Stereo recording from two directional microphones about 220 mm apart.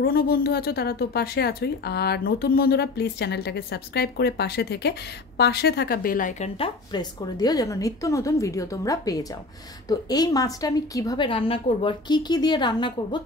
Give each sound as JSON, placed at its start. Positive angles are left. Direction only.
{"t": 0.0, "sound": "a woman's voice", "side_deg": 40}
{"t": 6.6, "sound": "a woman's voice", "side_deg": 20}